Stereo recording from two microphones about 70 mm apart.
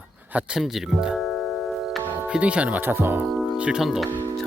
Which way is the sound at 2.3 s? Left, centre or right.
Centre.